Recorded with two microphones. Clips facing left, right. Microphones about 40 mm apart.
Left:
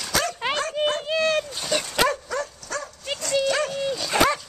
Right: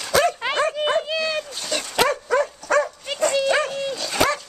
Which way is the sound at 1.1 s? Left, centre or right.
Left.